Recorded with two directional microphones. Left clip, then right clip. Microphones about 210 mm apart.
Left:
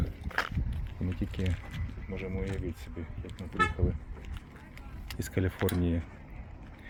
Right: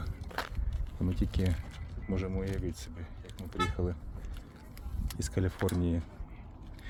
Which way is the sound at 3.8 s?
15° right (ahead or behind).